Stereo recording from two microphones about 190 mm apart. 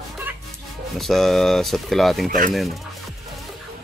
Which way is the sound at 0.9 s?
Centre (ahead or behind).